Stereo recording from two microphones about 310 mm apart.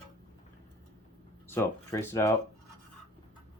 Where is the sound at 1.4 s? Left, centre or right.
Centre.